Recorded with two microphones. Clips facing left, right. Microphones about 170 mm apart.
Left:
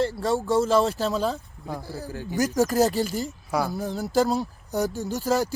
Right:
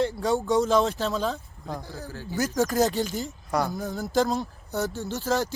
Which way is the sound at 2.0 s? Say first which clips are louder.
Left 4 dB; 15° left (ahead or behind).